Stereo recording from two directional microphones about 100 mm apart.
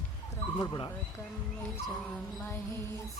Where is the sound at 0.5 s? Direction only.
40° left (ahead or behind).